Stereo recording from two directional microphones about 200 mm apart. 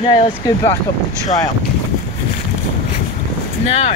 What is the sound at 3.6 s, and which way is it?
Speech, 30° left (ahead or behind).